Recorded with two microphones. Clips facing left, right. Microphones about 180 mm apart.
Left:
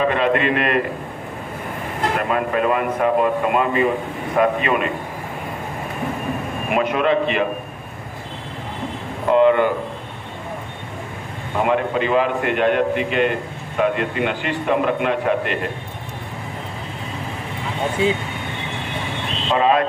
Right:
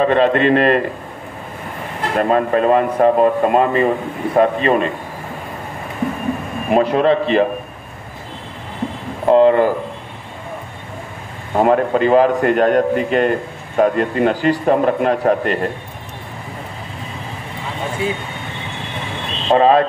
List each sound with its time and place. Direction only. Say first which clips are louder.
0.0 s a man's voice: right 5 dB; 35° right (ahead or behind)
2.1 s a man's voice: right 7 dB; 35° right (ahead or behind)
6.7 s a man's voice: right 5 dB; 35° right (ahead or behind)
9.3 s a man's voice: right 3 dB; 35° right (ahead or behind)
11.5 s a man's voice: right 5 dB; 40° right (ahead or behind)
18.0 s speech: left 3 dB; 25° left (ahead or behind)
19.5 s a man's voice: right 5 dB; 35° right (ahead or behind)